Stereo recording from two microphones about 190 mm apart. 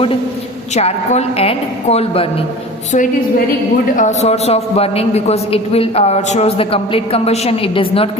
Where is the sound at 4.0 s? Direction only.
40° left (ahead or behind).